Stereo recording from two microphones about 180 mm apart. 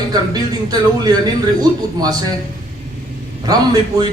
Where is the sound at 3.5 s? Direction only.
20° right (ahead or behind).